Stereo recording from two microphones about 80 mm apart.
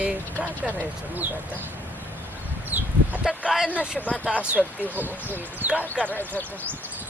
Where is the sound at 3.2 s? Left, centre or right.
Centre.